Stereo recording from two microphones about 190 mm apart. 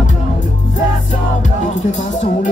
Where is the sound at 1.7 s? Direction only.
40° left (ahead or behind).